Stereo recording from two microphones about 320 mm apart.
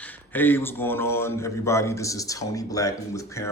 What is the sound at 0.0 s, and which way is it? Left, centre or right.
A man's voice, centre.